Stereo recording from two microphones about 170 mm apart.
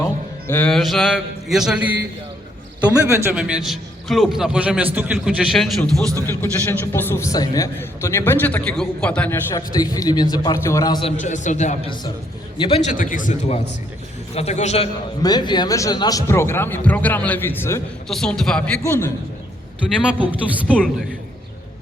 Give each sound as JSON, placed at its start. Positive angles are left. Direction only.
{"t": 0.0, "sound": "a man's voice", "side_deg": 10}
{"t": 3.3, "sound": "a man's voice", "side_deg": -5}
{"t": 6.2, "sound": "a man's voice", "side_deg": 15}
{"t": 9.6, "sound": "a man's voice", "side_deg": 25}
{"t": 11.0, "sound": "a man's voice", "side_deg": 45}
{"t": 12.5, "sound": "a man's voice", "side_deg": 30}
{"t": 12.9, "sound": "a man's voice", "side_deg": 50}
{"t": 14.3, "sound": "a man's voice", "side_deg": 40}
{"t": 15.2, "sound": "a man's voice", "side_deg": 25}
{"t": 18.1, "sound": "a man's voice", "side_deg": 5}
{"t": 18.8, "sound": "a man's voice", "side_deg": 15}
{"t": 20.7, "sound": "a man's voice", "side_deg": 5}